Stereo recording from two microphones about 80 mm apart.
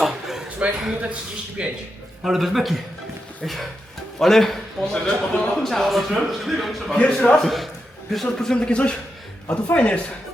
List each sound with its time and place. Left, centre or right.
0.0 s a man's voice: centre
6.9 s a man's voice: centre